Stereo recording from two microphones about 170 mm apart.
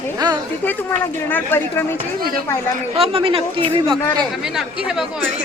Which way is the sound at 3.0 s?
35° right (ahead or behind).